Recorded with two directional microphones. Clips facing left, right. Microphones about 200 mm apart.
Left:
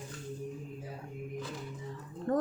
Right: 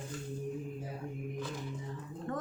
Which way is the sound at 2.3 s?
40° left (ahead or behind).